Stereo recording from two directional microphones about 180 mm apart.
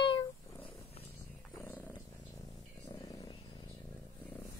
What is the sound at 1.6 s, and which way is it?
Purr, 10° left (ahead or behind).